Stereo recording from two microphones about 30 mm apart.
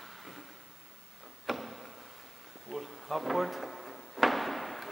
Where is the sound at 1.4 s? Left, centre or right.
Centre.